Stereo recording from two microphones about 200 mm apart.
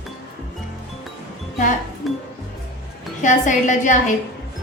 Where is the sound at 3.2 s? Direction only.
40° left (ahead or behind).